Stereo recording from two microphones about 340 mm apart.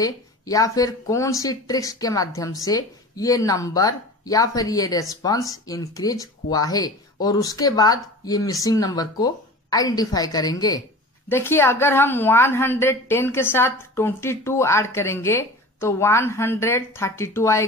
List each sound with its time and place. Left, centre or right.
0.0 s speech: centre